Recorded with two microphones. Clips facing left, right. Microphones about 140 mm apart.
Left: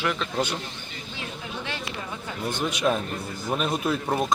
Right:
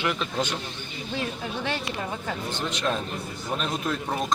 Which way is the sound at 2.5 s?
10° left (ahead or behind).